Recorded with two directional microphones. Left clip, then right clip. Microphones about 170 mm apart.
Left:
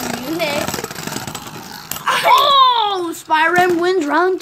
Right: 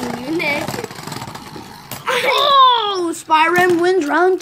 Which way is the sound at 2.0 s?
40° left (ahead or behind).